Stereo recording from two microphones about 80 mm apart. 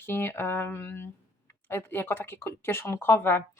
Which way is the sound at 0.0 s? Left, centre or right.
Left.